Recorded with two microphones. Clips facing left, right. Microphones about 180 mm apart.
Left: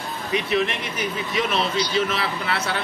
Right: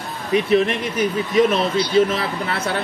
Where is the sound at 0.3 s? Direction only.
45° right (ahead or behind).